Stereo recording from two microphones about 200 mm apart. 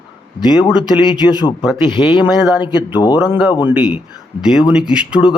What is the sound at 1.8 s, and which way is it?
Speech, 25° left (ahead or behind).